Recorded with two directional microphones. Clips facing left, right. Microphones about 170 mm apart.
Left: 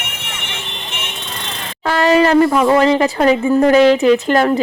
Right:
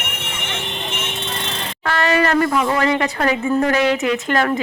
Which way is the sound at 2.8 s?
25° left (ahead or behind).